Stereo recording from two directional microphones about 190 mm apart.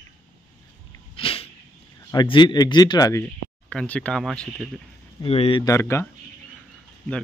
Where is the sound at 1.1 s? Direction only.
30° left (ahead or behind).